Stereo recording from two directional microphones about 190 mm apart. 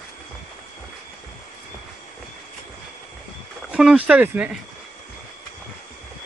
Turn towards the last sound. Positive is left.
turn(degrees=-5)  # may be behind; listen again after turning